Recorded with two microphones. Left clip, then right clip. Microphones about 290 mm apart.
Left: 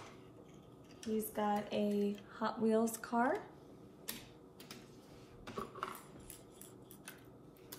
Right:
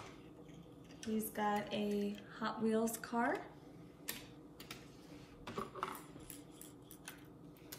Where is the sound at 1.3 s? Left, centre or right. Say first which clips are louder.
Even; centre.